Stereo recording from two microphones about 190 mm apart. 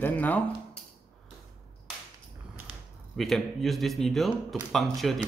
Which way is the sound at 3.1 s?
Centre (ahead or behind).